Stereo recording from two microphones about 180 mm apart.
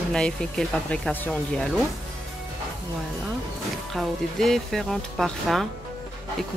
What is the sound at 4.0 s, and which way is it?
Speech, centre (ahead or behind).